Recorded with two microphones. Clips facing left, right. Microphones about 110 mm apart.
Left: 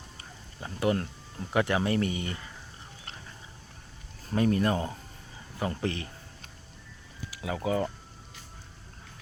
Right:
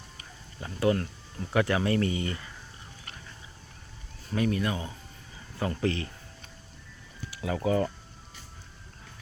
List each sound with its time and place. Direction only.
0.6 s speech: 20° left (ahead or behind)
4.3 s speech: 35° left (ahead or behind)
5.5 s speech: 20° left (ahead or behind)
7.3 s speech: 15° left (ahead or behind)